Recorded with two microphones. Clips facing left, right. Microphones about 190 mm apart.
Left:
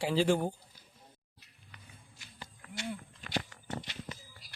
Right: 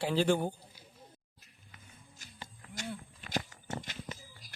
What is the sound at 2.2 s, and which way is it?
Livestock, 45° right (ahead or behind).